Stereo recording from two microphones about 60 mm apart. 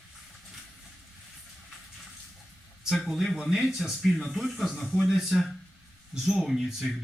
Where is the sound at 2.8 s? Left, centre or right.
Centre.